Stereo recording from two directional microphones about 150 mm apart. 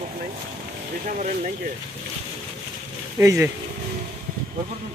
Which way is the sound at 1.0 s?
55° right (ahead or behind).